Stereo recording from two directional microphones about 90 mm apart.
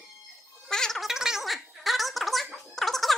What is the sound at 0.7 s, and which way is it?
Gargling, 5° left (ahead or behind).